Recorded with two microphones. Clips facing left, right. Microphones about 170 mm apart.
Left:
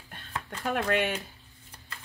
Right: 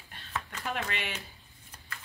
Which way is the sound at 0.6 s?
50° left (ahead or behind).